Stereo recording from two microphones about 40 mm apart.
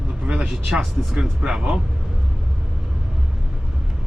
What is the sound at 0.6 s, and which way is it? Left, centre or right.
Speech, centre.